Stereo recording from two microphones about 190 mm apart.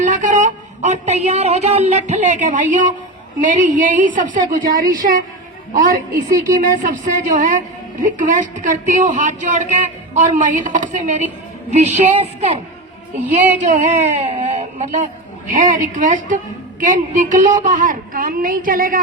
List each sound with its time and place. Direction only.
0.0 s a woman's voice: 40° right (ahead or behind)